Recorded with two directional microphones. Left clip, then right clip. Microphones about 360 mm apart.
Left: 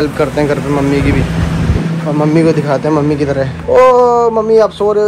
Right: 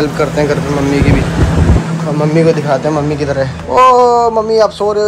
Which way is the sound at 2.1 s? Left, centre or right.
Centre.